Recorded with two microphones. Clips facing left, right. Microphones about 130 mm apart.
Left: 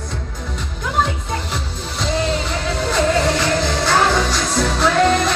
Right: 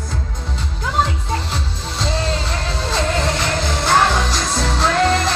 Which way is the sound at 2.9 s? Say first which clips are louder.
Left 3 dB; 25° right (ahead or behind).